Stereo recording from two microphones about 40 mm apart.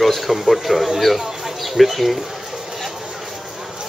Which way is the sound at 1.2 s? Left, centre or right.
Centre.